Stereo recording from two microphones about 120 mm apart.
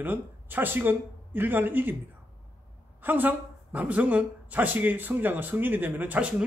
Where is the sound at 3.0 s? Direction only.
15° right (ahead or behind).